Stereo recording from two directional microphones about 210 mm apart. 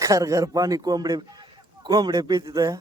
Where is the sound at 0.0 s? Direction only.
15° right (ahead or behind).